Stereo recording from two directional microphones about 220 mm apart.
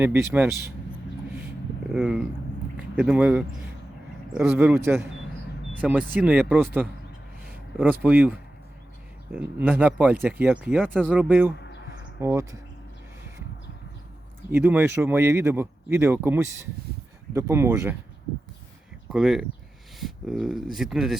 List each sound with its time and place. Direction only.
0.0 s speech: 10° right (ahead or behind)
1.9 s speech: 5° right (ahead or behind)
14.5 s speech: 10° right (ahead or behind)
19.0 s speech: centre (ahead or behind)